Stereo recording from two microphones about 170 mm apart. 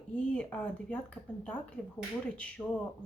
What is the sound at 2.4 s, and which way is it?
Speech, 5° left (ahead or behind).